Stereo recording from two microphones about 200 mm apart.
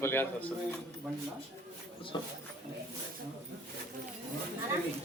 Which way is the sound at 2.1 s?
20° left (ahead or behind).